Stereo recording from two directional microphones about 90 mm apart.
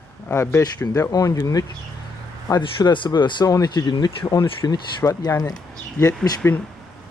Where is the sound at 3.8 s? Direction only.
60° left (ahead or behind).